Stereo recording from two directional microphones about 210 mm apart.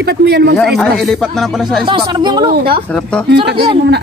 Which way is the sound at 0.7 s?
Centre (ahead or behind).